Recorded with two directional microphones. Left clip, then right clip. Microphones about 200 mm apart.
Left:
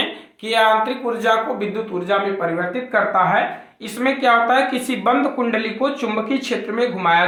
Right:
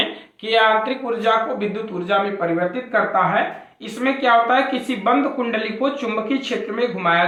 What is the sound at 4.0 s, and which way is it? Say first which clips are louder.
Speech: left 1 dB; 25° left (ahead or behind).